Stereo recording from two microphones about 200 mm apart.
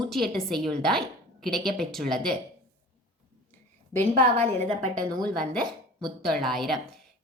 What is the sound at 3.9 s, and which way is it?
A woman's voice, 10° left (ahead or behind).